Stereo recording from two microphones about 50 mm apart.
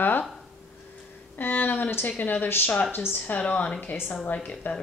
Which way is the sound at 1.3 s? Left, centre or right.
Left.